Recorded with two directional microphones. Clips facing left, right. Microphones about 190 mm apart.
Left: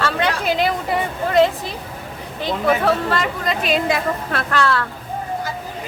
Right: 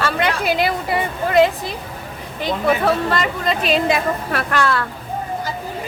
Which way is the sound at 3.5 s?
30° right (ahead or behind).